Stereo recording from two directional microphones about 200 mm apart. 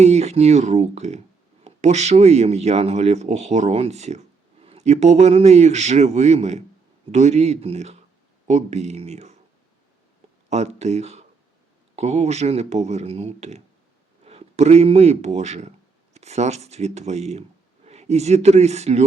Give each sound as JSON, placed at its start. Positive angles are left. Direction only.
{"t": 0.0, "sound": "speech", "side_deg": -35}
{"t": 10.5, "sound": "speech", "side_deg": -35}